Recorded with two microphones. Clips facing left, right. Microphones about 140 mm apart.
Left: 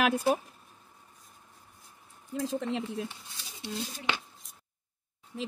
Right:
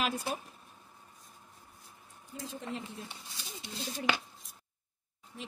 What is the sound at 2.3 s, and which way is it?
Speech, 90° left.